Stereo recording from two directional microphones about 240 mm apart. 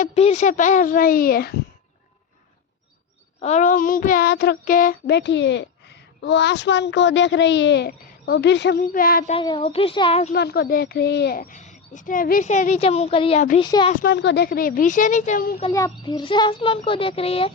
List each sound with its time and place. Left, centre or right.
0.0 s speech: left
3.4 s speech: left
9.3 s a child's voice: left
10.3 s a child's voice: left; by 13.9 s centre
14.0 s speech: left
15.6 s a child's voice: centre